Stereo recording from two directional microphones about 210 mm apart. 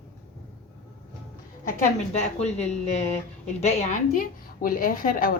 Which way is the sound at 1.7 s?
35° left (ahead or behind).